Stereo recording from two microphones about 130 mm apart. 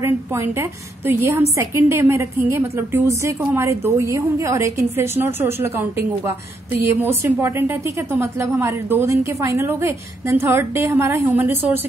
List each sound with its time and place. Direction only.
0.0 s a woman's voice: 20° right (ahead or behind)